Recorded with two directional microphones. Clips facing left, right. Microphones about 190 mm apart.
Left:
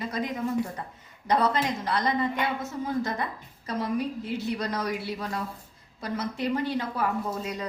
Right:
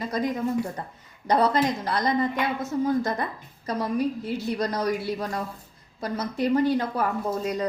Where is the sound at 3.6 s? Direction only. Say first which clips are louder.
Right 3 dB; 40° right (ahead or behind).